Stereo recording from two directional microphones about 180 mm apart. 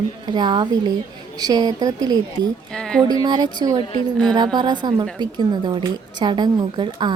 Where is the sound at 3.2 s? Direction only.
25° right (ahead or behind).